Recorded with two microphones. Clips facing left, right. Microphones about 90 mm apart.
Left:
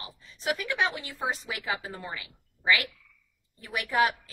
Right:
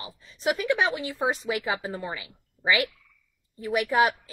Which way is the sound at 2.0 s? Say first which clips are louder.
Right 4 dB; 20° right (ahead or behind).